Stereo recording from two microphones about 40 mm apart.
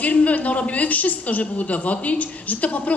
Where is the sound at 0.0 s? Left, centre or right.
Left.